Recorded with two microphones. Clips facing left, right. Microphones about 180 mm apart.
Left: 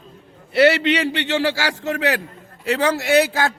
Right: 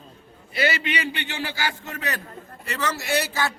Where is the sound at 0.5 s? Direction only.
75° left (ahead or behind).